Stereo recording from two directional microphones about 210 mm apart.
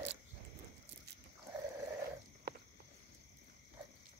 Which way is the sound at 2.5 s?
50° right (ahead or behind).